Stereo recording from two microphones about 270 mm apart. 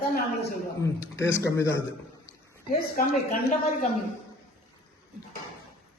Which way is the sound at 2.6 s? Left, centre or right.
Left.